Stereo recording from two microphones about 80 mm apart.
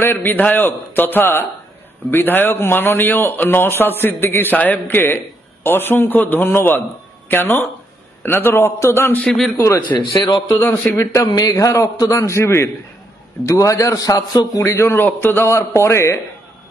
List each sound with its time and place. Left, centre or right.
0.0 s a man's voice: left
9.2 s a man's voice: centre
9.9 s a man's voice: left
11.0 s a man's voice: left
14.6 s a man's voice: left